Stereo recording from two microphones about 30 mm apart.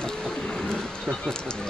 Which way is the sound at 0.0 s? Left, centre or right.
Left.